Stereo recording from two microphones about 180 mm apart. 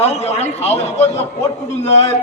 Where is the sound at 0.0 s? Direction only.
35° left (ahead or behind).